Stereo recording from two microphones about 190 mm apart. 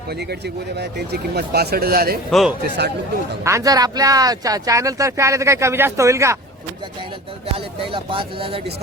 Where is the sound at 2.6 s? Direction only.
60° right (ahead or behind).